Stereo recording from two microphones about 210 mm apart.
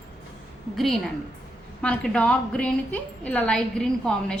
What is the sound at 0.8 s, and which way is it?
A woman's voice, centre (ahead or behind).